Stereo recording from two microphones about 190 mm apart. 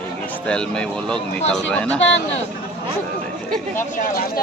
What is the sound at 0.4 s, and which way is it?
Speech, 5° left (ahead or behind).